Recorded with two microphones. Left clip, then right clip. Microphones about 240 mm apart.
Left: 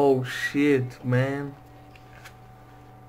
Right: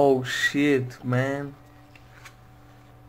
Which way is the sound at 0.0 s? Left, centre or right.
Centre.